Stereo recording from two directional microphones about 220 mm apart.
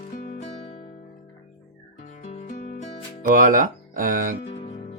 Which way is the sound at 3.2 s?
35° right (ahead or behind).